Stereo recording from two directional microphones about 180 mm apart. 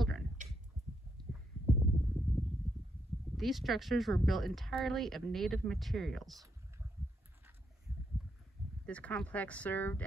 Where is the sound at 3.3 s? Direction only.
Centre (ahead or behind).